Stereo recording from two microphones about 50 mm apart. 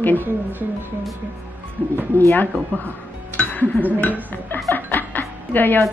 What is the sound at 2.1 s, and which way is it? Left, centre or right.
Speech, left.